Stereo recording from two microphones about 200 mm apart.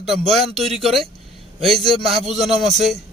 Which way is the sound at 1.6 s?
Centre (ahead or behind).